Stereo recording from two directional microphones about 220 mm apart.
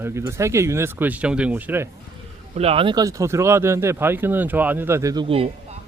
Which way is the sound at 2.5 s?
25° right (ahead or behind).